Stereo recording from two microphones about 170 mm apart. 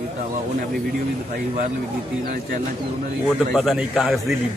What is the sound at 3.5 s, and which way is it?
Speech, centre (ahead or behind).